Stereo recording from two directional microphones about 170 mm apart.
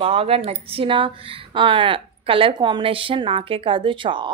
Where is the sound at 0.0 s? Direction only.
35° right (ahead or behind).